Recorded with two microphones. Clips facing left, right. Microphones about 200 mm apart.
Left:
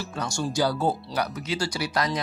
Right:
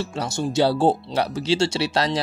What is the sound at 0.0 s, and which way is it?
Speech, 25° right (ahead or behind).